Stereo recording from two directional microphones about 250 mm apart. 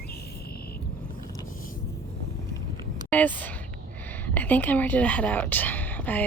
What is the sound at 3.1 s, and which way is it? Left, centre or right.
Speech, centre.